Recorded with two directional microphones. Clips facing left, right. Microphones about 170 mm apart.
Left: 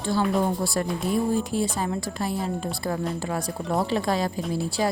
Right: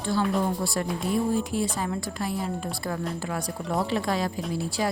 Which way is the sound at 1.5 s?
30° left (ahead or behind).